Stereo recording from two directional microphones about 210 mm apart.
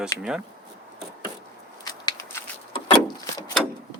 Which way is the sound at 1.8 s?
20° left (ahead or behind).